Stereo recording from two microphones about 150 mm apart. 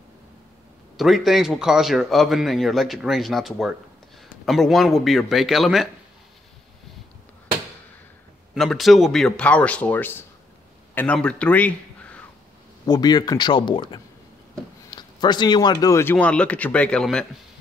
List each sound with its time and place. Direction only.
0.9 s speech: centre (ahead or behind)
8.5 s a man's voice: centre (ahead or behind)
12.8 s a man's voice: 25° left (ahead or behind); by 17.3 s 5° left (ahead or behind)